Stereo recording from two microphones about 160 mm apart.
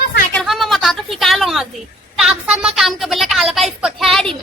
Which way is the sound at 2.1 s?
5° right (ahead or behind).